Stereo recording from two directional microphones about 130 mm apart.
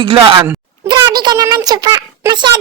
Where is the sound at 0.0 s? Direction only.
40° right (ahead or behind).